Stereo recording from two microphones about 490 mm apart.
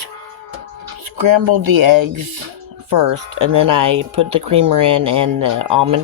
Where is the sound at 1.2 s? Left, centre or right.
Right.